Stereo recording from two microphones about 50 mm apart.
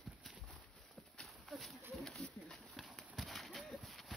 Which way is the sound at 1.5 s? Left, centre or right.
Centre.